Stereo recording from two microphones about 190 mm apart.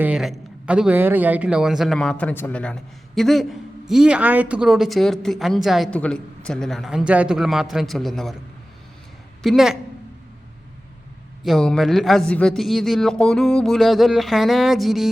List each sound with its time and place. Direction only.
0.0 s a man's voice: 5° right (ahead or behind)
9.4 s a man's voice: centre (ahead or behind)
11.4 s a man's voice: centre (ahead or behind)